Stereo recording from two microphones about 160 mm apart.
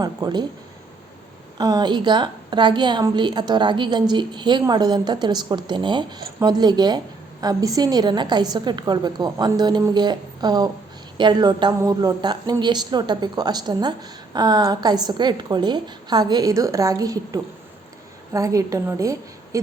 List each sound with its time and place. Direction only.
0.0 s a woman's voice: 25° right (ahead or behind)
1.5 s a woman's voice: 25° right (ahead or behind)